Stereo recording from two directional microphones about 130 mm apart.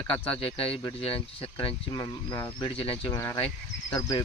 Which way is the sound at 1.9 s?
30° left (ahead or behind).